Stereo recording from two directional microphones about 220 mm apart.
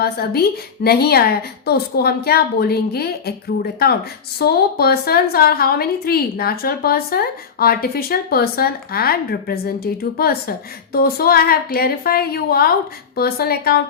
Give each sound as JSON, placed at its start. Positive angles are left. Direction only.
{"t": 0.0, "sound": "a woman's voice", "side_deg": 45}